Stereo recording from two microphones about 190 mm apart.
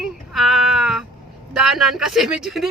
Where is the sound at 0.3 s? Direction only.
Centre (ahead or behind).